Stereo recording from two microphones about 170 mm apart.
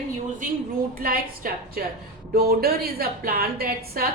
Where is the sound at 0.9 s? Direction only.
60° right (ahead or behind).